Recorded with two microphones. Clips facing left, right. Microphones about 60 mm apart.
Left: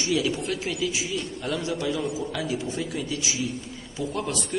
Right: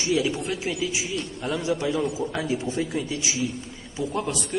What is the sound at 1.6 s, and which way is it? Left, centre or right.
Speech, right.